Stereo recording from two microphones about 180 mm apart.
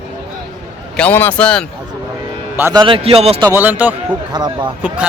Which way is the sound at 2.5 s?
15° right (ahead or behind).